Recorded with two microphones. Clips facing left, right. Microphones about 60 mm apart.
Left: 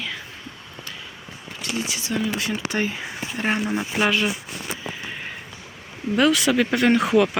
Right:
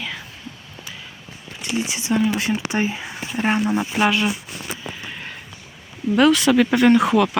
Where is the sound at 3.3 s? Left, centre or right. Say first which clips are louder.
Right 4 dB; centre.